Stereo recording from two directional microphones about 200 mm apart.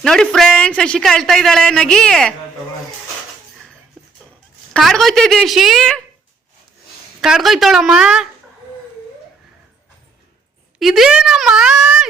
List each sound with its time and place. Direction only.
0.0 s speech: 5° left (ahead or behind)
4.7 s speech: centre (ahead or behind)
7.2 s speech: centre (ahead or behind)
10.8 s speech: centre (ahead or behind)